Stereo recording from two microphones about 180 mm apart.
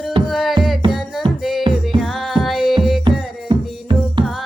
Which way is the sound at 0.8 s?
30° right (ahead or behind).